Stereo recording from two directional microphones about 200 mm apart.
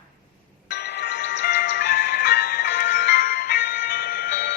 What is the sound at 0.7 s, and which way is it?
Music, 55° left (ahead or behind).